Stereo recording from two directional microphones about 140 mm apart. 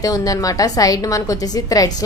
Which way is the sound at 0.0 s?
25° left (ahead or behind).